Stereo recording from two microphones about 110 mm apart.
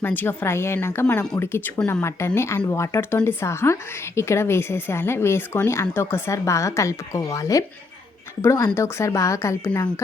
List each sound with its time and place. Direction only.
0.0 s a woman's voice: 20° left (ahead or behind)